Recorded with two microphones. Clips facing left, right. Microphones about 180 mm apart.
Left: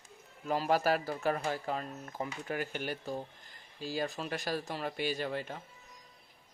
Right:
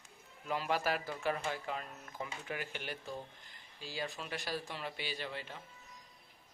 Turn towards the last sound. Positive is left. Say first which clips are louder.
# left 7 dB
turn(degrees=45)  # may be behind; listen again after turning